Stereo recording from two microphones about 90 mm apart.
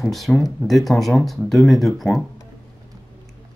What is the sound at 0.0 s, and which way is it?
Speech, centre (ahead or behind).